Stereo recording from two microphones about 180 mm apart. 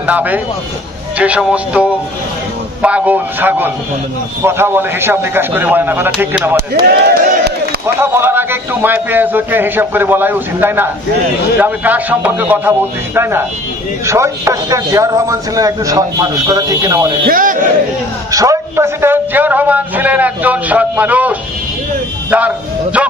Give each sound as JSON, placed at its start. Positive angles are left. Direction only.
{"t": 0.0, "sound": "speech", "side_deg": -10}
{"t": 6.7, "sound": "speech", "side_deg": -60}
{"t": 7.8, "sound": "a man's voice", "side_deg": -15}
{"t": 17.2, "sound": "a man's voice", "side_deg": -50}
{"t": 18.3, "sound": "speech", "side_deg": -20}